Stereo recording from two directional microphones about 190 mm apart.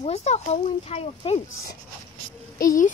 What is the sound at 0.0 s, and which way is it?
Speech, 35° left (ahead or behind).